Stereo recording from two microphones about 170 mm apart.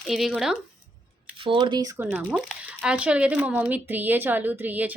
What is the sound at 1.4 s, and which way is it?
Speech, 30° right (ahead or behind).